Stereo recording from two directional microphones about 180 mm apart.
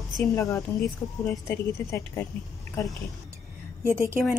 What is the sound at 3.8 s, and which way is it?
Speech, 15° right (ahead or behind).